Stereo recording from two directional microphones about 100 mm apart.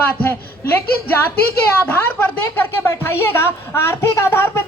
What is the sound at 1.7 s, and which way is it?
Speech, 25° left (ahead or behind).